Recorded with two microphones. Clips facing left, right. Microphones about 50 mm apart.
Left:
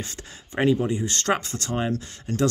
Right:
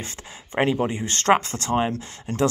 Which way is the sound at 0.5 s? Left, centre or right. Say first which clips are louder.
Even; right.